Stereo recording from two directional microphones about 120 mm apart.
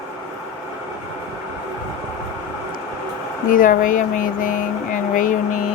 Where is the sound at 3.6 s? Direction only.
90° left.